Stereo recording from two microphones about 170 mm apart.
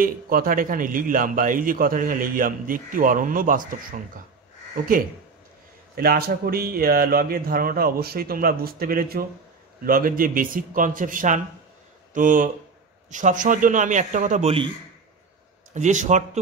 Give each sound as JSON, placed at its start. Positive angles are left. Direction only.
{"t": 0.0, "sound": "a man's voice", "side_deg": -55}
{"t": 5.9, "sound": "a man's voice", "side_deg": -65}
{"t": 15.7, "sound": "a man's voice", "side_deg": -45}